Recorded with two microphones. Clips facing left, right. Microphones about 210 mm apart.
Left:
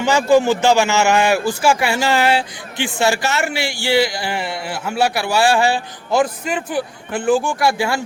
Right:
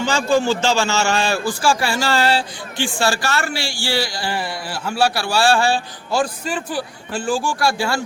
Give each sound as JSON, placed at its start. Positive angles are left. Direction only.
{"t": 0.0, "sound": "a man's voice", "side_deg": 20}